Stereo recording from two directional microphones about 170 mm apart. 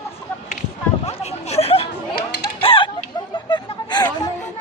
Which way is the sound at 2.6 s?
30° left (ahead or behind).